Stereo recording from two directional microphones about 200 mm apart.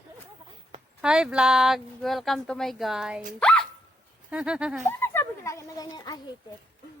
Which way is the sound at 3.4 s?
5° left (ahead or behind).